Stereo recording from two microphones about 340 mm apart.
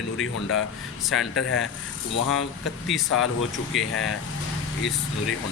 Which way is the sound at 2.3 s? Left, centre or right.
Left.